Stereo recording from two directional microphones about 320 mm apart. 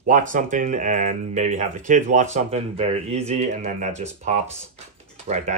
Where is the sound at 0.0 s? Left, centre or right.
Right.